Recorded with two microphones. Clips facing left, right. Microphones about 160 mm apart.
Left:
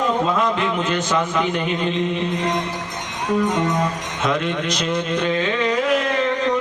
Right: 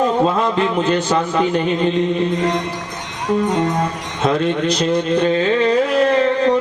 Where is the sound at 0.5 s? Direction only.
35° right (ahead or behind).